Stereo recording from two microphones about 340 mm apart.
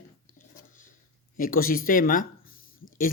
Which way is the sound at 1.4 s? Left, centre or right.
Left.